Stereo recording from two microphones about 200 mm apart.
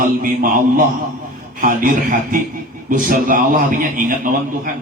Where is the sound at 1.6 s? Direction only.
40° right (ahead or behind).